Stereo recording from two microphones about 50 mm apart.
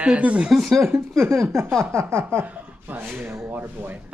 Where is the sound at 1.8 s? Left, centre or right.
Right.